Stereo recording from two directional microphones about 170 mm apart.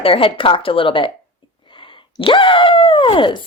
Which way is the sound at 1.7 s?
30° left (ahead or behind).